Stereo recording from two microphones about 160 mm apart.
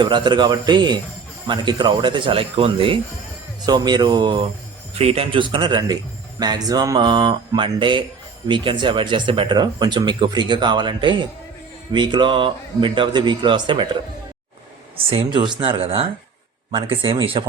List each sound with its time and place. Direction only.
0.0 s speech: 30° right (ahead or behind)
4.9 s speech: 40° right (ahead or behind)
15.1 s speech: 30° right (ahead or behind)